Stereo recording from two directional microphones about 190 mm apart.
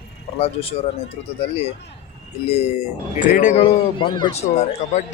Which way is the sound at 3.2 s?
40° left (ahead or behind).